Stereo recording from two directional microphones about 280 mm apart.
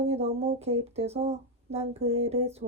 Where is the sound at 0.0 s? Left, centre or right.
Right.